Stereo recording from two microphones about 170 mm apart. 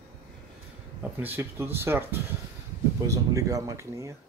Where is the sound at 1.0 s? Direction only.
10° right (ahead or behind).